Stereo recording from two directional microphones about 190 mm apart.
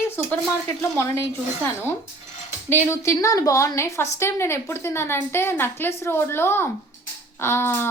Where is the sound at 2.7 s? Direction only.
10° left (ahead or behind).